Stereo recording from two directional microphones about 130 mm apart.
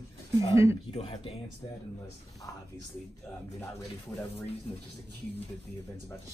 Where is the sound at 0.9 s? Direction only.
55° left (ahead or behind).